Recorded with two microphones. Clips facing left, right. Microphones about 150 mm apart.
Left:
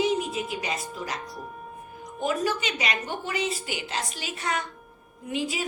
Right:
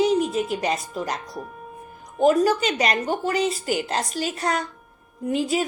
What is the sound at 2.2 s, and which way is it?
Speech, 40° right (ahead or behind).